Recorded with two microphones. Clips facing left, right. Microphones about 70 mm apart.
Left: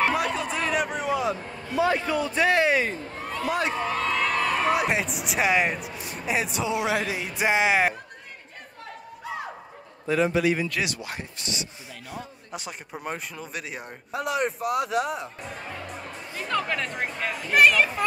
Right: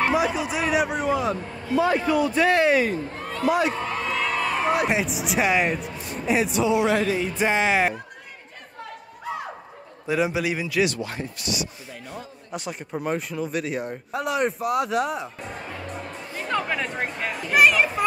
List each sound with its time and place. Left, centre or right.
0.0 s a sound: centre
2.0 s a man's voice: centre
2.3 s speech: centre
4.0 s a man's voice: centre
10.0 s a man's voice: centre
11.3 s speech: left
12.1 s a man's voice: centre
16.4 s speech: centre